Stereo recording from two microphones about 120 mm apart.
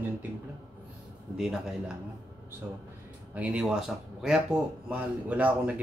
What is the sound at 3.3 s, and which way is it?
Speech, 10° right (ahead or behind).